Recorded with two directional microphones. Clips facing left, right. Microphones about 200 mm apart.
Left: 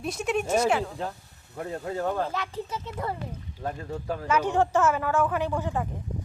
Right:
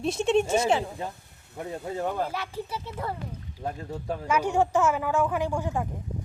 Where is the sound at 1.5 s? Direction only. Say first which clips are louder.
Left 1 dB; 10° right (ahead or behind).